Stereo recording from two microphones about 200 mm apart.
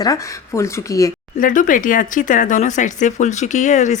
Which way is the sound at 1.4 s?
40° left (ahead or behind).